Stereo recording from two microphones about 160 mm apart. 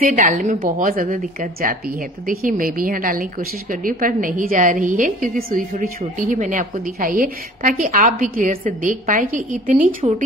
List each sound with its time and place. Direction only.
0.1 s a woman's voice: 55° right (ahead or behind)